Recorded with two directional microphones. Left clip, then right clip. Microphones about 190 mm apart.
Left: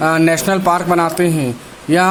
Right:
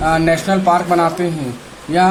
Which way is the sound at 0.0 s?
40° left (ahead or behind).